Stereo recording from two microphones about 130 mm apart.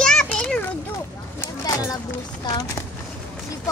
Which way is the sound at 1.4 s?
25° left (ahead or behind).